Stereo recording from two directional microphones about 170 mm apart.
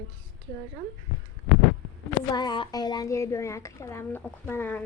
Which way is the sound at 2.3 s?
25° left (ahead or behind).